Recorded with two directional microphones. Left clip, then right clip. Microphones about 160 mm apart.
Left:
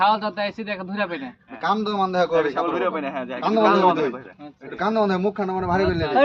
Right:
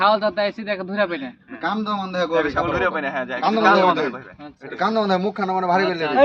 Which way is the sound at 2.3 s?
Centre (ahead or behind).